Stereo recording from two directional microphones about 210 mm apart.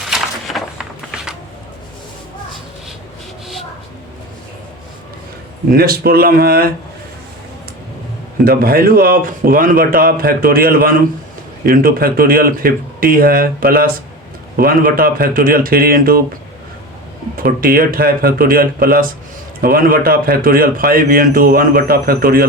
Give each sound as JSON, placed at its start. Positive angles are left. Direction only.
{"t": 0.0, "sound": "a sound", "side_deg": 0}
{"t": 5.7, "sound": "a man's voice", "side_deg": -45}
{"t": 8.4, "sound": "a man's voice", "side_deg": -45}
{"t": 17.3, "sound": "a man's voice", "side_deg": -45}